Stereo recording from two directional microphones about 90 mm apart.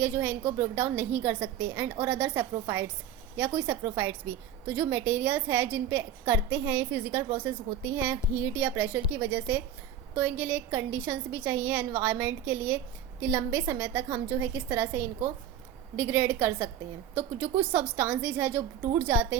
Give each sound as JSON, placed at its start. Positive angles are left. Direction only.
{"t": 0.0, "sound": "a woman's voice", "side_deg": -20}